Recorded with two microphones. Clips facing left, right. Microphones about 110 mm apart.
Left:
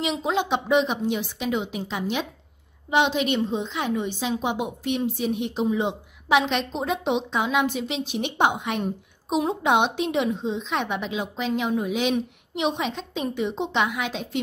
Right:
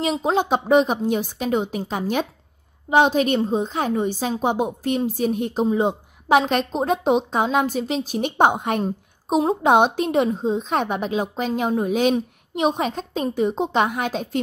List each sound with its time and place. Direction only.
0.0 s a woman's voice: 40° right (ahead or behind)